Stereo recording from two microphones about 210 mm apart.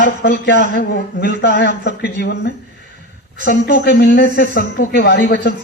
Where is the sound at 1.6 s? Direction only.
60° left (ahead or behind).